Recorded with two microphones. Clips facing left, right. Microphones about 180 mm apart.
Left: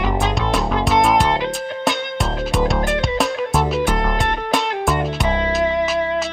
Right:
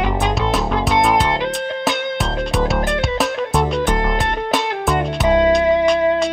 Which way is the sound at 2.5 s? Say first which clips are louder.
Even; centre (ahead or behind).